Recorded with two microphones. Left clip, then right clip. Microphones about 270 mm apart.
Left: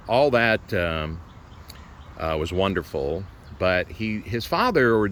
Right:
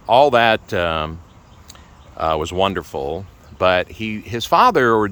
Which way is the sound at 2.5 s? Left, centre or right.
Centre.